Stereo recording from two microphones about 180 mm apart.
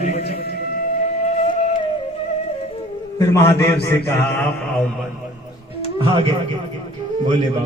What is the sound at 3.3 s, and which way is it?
Speech, 15° left (ahead or behind).